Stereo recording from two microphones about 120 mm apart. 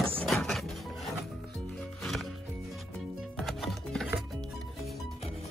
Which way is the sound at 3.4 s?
Centre (ahead or behind).